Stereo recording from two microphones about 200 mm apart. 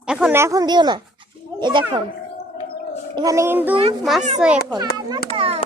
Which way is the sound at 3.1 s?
15° right (ahead or behind).